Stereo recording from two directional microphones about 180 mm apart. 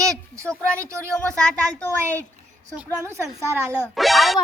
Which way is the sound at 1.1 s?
5° left (ahead or behind).